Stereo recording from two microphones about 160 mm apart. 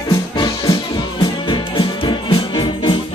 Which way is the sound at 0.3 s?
25° left (ahead or behind).